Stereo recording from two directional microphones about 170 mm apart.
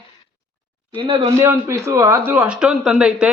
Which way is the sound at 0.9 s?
30° right (ahead or behind).